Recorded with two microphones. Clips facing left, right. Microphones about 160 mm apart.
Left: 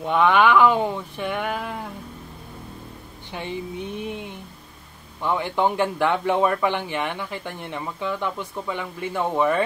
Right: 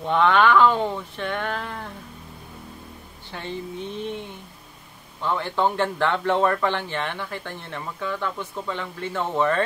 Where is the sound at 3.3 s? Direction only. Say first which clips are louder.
Left 2 dB; 15° left (ahead or behind).